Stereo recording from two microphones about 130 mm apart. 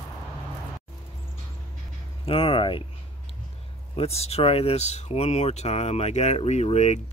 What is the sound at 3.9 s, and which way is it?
Speech, 55° left (ahead or behind).